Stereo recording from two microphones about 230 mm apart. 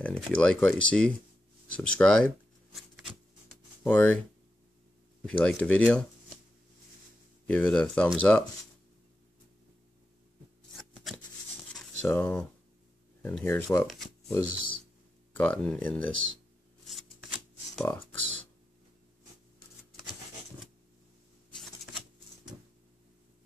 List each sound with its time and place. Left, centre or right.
0.0 s speech: centre
1.7 s a sound: centre
3.8 s speech: centre
5.2 s speech: centre
7.4 s speech: centre
10.8 s shuffling cards: centre
12.0 s speech: centre
13.8 s speech: centre
14.5 s speech: right
15.3 s speech: centre
16.1 s speech: right
17.9 s speech: centre